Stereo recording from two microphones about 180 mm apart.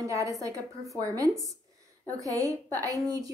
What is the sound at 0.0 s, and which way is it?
A woman's voice, 20° right (ahead or behind).